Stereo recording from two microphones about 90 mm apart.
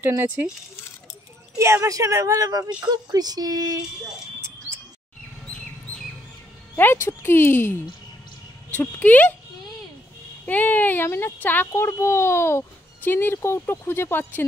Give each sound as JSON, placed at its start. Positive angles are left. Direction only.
{"t": 1.6, "sound": "a woman's voice", "side_deg": -30}
{"t": 6.8, "sound": "speech", "side_deg": 25}
{"t": 10.4, "sound": "speech", "side_deg": 20}